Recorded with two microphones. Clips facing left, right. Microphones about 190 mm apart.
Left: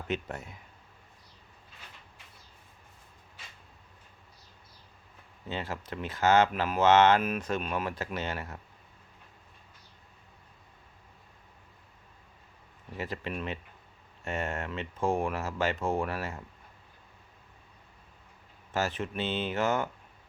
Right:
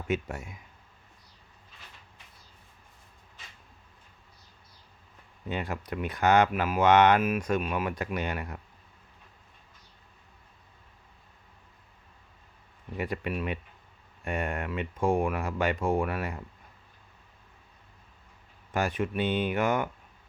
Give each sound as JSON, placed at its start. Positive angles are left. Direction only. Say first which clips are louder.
{"t": 0.1, "sound": "speech", "louder": "right 4 dB", "side_deg": -10}
{"t": 5.5, "sound": "speech", "louder": "right 3 dB", "side_deg": -15}
{"t": 13.3, "sound": "speech", "louder": "right 3 dB", "side_deg": -15}
{"t": 18.7, "sound": "speech", "louder": "right 3 dB", "side_deg": -15}